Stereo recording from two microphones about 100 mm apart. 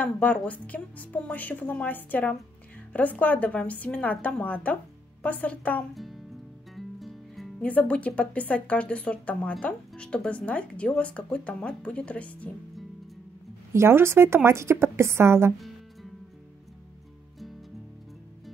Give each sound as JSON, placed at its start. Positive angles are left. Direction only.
{"t": 0.0, "sound": "speech", "side_deg": 15}
{"t": 5.9, "sound": "music", "side_deg": 0}
{"t": 7.6, "sound": "speech", "side_deg": 15}
{"t": 13.7, "sound": "speech", "side_deg": -25}